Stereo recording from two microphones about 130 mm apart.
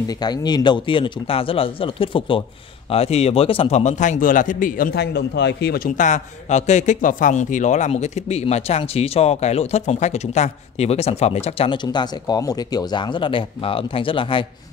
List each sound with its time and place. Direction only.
0.2 s a man's voice: 30° left (ahead or behind); by 4.9 s 90° left
5.9 s a man's voice: 75° left (ahead or behind); by 14.4 s 40° left (ahead or behind)